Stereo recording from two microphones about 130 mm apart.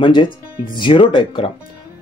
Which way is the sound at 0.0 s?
40° left (ahead or behind).